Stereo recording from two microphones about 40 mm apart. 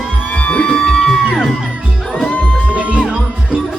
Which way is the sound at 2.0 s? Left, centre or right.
Centre.